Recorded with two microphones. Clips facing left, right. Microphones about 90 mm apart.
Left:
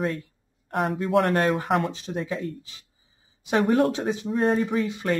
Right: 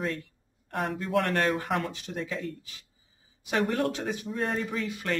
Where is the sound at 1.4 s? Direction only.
35° left (ahead or behind).